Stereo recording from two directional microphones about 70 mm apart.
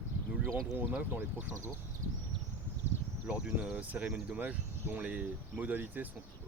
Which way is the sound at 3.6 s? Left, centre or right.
Centre.